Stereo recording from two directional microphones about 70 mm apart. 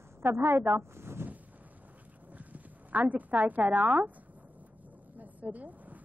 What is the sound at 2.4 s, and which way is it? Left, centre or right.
Speech, right.